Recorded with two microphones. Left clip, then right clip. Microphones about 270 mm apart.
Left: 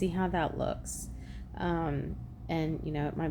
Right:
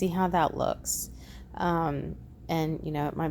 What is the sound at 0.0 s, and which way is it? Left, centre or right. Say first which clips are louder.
Speech: right 6 dB; right.